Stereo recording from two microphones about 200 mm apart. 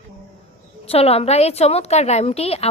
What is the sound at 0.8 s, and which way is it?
Speech, 30° left (ahead or behind).